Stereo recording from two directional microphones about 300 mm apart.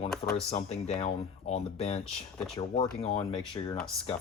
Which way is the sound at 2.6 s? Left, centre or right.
Centre.